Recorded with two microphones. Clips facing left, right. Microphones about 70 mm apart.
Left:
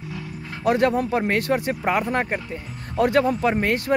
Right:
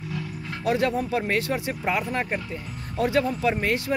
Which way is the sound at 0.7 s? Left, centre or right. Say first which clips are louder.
Left 4 dB; left.